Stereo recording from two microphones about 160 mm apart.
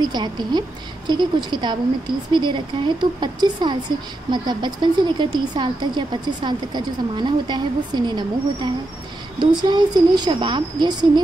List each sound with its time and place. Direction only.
0.0 s speech: 25° right (ahead or behind)